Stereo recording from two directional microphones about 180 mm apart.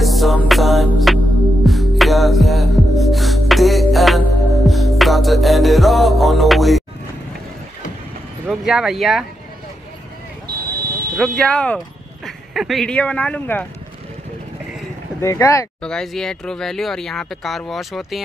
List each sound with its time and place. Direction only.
0.0 s music: centre (ahead or behind)
8.5 s speech: centre (ahead or behind)
10.7 s a sound: 60° right (ahead or behind)
11.1 s speech: centre (ahead or behind)
15.1 s speech: 15° left (ahead or behind)
15.8 s speech: 5° left (ahead or behind)